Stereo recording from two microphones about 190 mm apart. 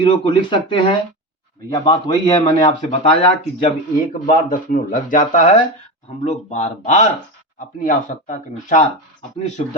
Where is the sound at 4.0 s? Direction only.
45° left (ahead or behind).